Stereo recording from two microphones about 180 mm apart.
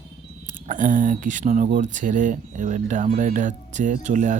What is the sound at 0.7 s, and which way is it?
Speech, 45° right (ahead or behind).